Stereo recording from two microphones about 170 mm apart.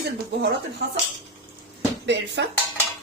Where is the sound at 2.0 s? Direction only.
90° right.